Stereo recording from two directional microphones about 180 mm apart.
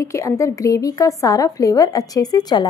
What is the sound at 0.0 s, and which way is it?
A woman's voice, 15° left (ahead or behind).